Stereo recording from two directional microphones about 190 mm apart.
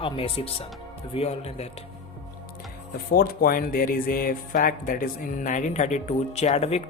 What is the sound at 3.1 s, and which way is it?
Speech, 50° left (ahead or behind).